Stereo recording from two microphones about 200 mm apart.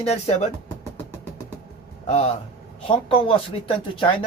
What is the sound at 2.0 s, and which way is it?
Speech, 30° left (ahead or behind).